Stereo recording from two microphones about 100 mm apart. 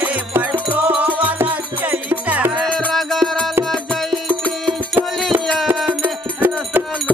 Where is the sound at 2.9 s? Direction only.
Centre (ahead or behind).